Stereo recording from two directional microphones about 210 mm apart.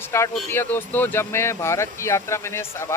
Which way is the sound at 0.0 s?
10° left (ahead or behind).